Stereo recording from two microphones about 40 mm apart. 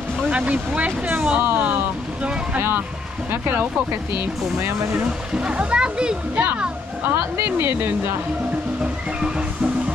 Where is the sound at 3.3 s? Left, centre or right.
Right.